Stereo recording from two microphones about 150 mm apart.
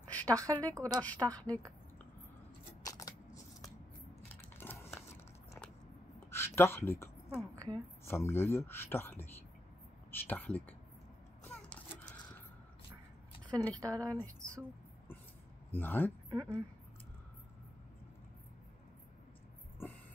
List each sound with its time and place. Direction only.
0.1 s a sound: 10° left (ahead or behind)
0.5 s speech: 10° left (ahead or behind)
0.7 s speech: 25° right (ahead or behind)
1.0 s speech: 10° left (ahead or behind)
2.8 s coin: 25° left (ahead or behind)
4.6 s a sound: 15° left (ahead or behind)
6.3 s speech: 15° left (ahead or behind)
11.4 s a sound: 5° left (ahead or behind)
13.7 s speech: 25° right (ahead or behind)
14.1 s speech: 10° left (ahead or behind)
15.7 s speech: 15° left (ahead or behind)
16.3 s speech: 20° right (ahead or behind)